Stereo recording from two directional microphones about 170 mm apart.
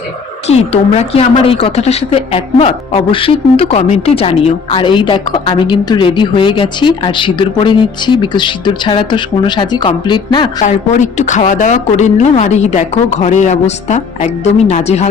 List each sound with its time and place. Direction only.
0.4 s a woman's voice: 40° left (ahead or behind)
10.6 s a woman's voice: 45° left (ahead or behind)